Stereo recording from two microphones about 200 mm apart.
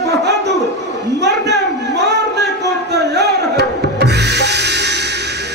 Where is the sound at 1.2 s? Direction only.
60° right (ahead or behind).